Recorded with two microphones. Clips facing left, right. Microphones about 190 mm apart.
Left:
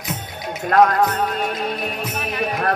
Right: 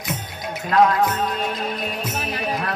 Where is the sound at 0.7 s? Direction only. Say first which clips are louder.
Left 2 dB; 50° left (ahead or behind).